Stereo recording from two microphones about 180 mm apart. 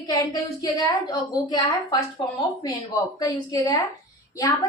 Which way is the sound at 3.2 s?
20° left (ahead or behind).